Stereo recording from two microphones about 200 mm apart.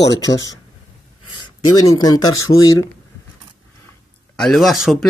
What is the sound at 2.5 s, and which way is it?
Speech, 40° left (ahead or behind).